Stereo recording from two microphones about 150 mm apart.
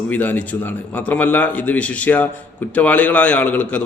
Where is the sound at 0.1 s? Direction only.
10° left (ahead or behind).